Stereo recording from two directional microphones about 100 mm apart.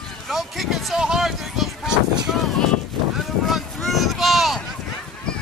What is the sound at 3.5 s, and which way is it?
Vehicle, centre (ahead or behind).